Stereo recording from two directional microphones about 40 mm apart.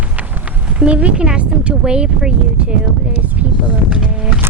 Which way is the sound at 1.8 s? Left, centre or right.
Right.